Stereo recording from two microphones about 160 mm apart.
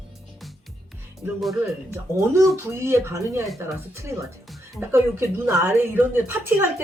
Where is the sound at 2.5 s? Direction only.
15° right (ahead or behind).